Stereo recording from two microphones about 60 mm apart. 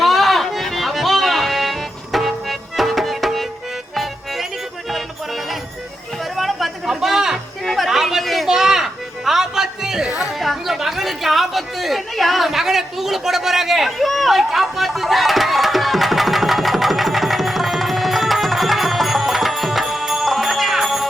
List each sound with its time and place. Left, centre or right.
0.0 s music: centre
6.3 s a sound: centre
10.2 s chatter: centre